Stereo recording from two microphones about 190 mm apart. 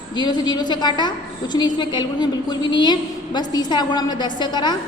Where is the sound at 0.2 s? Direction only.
20° left (ahead or behind).